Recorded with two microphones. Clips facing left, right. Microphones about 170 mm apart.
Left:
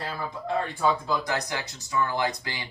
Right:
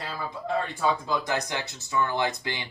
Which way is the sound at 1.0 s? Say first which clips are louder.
Even; 20° right (ahead or behind).